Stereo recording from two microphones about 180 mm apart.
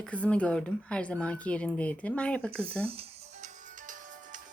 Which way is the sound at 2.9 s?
35° right (ahead or behind).